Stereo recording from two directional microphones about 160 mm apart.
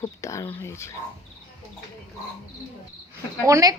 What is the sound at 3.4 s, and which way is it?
Speech, 20° right (ahead or behind).